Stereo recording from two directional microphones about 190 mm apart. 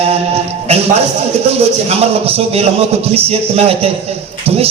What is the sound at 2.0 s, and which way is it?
Music, 30° right (ahead or behind).